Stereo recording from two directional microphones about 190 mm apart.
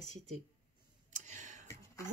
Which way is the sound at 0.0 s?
35° right (ahead or behind).